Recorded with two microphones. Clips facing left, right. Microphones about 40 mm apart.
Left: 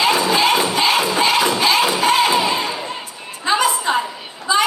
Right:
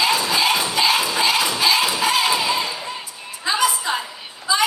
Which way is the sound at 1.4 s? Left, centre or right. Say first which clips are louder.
Left 3 dB; left.